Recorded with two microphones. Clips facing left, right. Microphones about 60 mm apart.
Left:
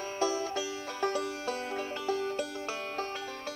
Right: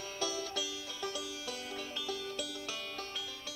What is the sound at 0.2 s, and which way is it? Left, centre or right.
Music, left.